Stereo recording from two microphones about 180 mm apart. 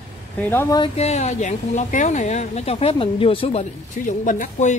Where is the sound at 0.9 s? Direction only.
35° left (ahead or behind).